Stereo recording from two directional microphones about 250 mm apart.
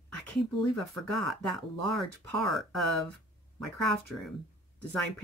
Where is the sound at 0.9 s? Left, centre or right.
Centre.